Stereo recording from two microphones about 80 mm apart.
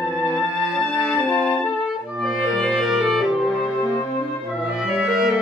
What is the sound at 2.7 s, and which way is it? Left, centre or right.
Music, centre.